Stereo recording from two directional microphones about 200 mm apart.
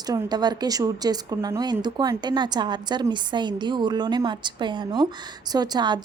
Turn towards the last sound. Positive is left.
turn(degrees=-20)  # may be behind; listen again after turning